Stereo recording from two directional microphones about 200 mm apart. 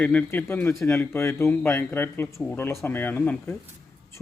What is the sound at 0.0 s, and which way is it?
Speech, 5° left (ahead or behind).